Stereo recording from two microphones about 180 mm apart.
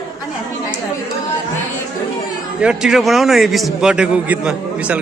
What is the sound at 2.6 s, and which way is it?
A man's voice, 5° right (ahead or behind).